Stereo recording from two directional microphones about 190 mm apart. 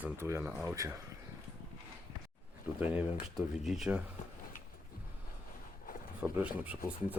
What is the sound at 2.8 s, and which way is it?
Speech, 10° right (ahead or behind).